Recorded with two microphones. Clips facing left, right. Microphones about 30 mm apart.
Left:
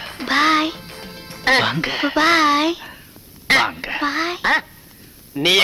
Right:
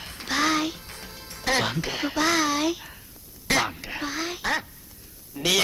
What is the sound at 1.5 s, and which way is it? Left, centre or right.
A man's voice, left.